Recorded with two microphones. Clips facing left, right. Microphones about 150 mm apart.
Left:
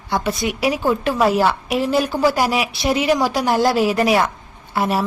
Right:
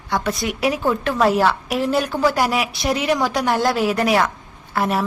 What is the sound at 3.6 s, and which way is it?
A woman's voice, 20° left (ahead or behind).